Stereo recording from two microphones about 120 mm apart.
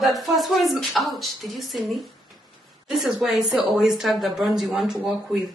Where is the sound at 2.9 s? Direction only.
Centre (ahead or behind).